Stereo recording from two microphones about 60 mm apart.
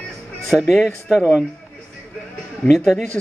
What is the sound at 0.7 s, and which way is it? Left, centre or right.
Speech, centre.